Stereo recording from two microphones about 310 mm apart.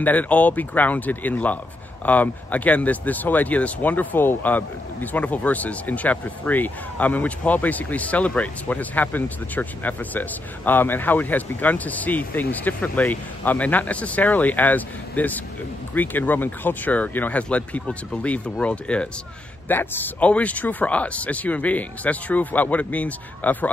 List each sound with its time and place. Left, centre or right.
0.0 s speech: centre